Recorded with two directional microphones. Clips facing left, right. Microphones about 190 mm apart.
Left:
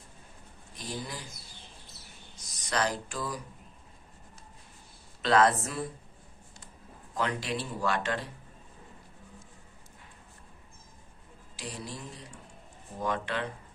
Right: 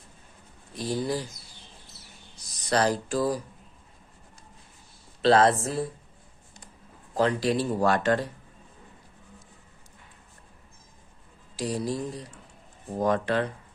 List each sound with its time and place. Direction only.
0.8 s speech: 35° right (ahead or behind)
2.6 s speech: 35° right (ahead or behind)
5.2 s speech: 30° right (ahead or behind)
7.1 s speech: 35° right (ahead or behind)
11.5 s speech: 40° right (ahead or behind)